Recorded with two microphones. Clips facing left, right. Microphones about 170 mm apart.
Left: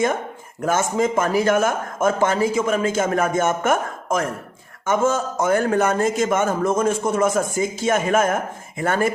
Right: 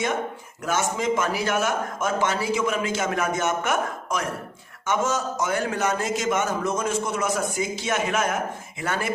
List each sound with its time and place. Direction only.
0.6 s a man's voice: 50° left (ahead or behind)